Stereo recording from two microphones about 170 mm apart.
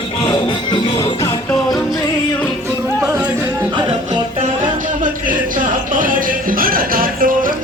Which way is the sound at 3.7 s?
25° right (ahead or behind).